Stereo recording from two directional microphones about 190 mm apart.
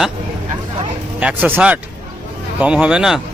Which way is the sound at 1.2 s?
5° right (ahead or behind).